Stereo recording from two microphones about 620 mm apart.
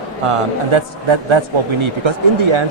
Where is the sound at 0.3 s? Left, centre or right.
Right.